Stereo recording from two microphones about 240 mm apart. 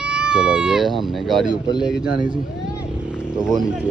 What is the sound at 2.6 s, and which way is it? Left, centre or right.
Vehicle, centre.